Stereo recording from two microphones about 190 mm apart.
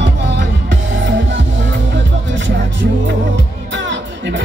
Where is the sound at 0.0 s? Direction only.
65° right (ahead or behind).